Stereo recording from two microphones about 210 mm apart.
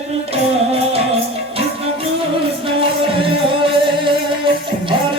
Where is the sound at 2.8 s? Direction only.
25° right (ahead or behind).